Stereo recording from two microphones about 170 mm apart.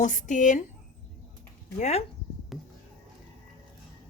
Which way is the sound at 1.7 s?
40° left (ahead or behind).